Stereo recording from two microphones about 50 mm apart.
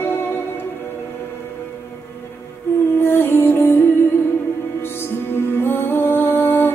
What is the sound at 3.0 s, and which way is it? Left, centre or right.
Music, left.